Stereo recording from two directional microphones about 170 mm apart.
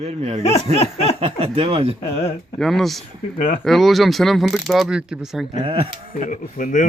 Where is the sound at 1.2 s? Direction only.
35° right (ahead or behind).